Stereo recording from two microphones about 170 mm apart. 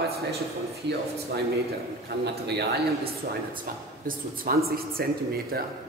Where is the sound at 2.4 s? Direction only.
80° right.